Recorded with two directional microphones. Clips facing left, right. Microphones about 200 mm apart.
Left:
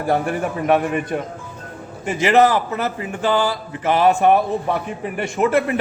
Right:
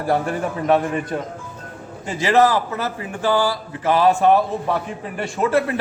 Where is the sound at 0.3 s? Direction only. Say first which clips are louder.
Left 1 dB; 15° left (ahead or behind).